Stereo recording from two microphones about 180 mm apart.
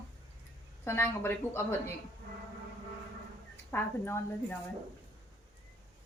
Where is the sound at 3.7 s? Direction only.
15° left (ahead or behind).